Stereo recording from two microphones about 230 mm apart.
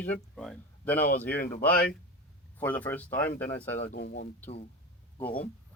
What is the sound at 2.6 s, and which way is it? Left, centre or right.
Speech, centre.